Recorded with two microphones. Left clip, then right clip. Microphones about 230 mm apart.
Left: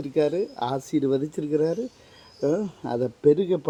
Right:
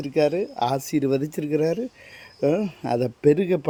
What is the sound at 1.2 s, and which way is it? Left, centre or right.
Speech, right.